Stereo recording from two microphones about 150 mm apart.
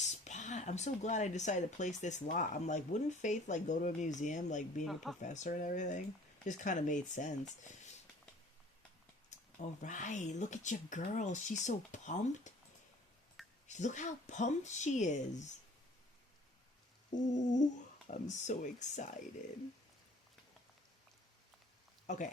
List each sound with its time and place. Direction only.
0.0 s speech: 50° left (ahead or behind)
9.6 s speech: 55° left (ahead or behind)
13.7 s speech: 50° left (ahead or behind)
17.2 s speech: 55° left (ahead or behind)
22.0 s speech: 55° left (ahead or behind)